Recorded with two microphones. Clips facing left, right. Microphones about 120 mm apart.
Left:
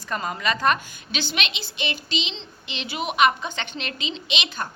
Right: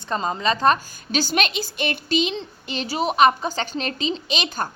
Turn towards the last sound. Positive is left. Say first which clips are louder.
# right 4 dB
turn(degrees=-40)  # may be behind; listen again after turning